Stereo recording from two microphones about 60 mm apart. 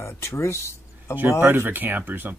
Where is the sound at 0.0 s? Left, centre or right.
Left.